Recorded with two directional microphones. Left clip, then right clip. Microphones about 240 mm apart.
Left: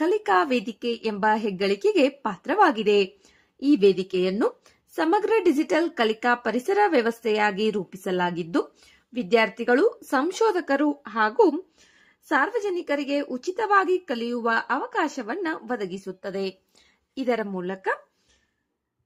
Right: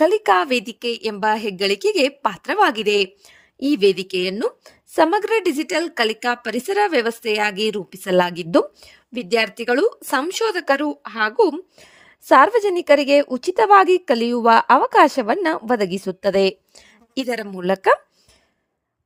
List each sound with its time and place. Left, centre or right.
0.0 s a woman's voice: right
17.2 s speech: centre
17.6 s speech: right